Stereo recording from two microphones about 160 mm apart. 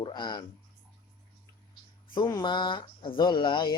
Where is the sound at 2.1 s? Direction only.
25° left (ahead or behind).